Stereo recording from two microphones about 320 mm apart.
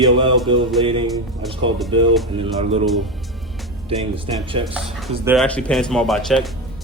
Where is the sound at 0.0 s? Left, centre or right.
Centre.